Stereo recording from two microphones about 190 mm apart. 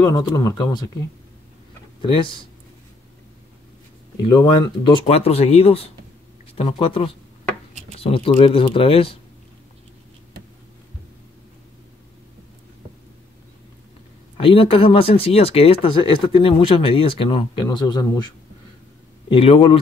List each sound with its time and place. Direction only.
0.0 s speech: 20° left (ahead or behind)
2.0 s speech: 25° left (ahead or behind)
4.4 s speech: 25° left (ahead or behind)
14.3 s speech: 30° left (ahead or behind)